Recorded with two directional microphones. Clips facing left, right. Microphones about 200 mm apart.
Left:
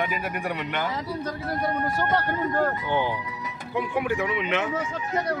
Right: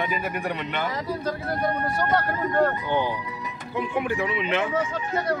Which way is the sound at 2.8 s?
15° left (ahead or behind).